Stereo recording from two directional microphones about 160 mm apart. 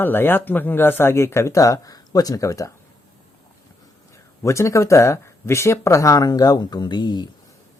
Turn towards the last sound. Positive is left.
turn(degrees=25)  # may be behind; listen again after turning